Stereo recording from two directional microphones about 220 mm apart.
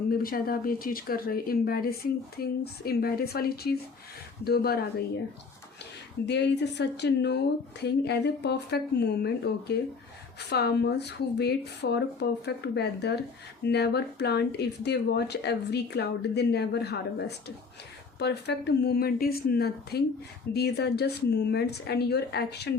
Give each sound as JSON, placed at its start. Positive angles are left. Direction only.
{"t": 0.1, "sound": "speech", "side_deg": 40}
{"t": 6.2, "sound": "speech", "side_deg": 50}